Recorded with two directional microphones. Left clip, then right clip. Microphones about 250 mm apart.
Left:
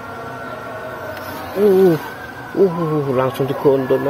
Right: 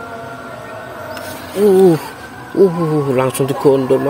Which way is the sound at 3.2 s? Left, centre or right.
Right.